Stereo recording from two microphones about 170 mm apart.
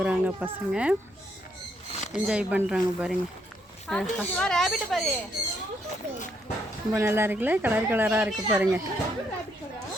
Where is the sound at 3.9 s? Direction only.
5° left (ahead or behind).